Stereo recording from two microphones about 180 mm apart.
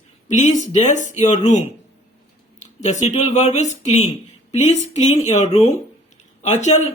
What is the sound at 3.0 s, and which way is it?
Speech, 40° left (ahead or behind).